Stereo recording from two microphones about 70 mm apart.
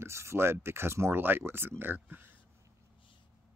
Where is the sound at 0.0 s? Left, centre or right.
Right.